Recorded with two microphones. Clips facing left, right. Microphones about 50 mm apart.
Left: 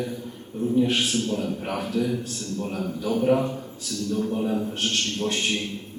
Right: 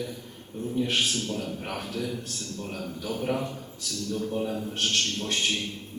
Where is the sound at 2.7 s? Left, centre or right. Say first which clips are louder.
Left 6 dB; left.